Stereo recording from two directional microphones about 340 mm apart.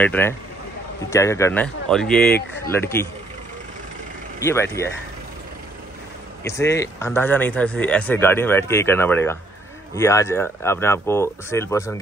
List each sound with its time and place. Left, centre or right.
0.0 s speech: centre
2.3 s speech: left
2.7 s speech: centre
4.4 s speech: centre
6.4 s speech: centre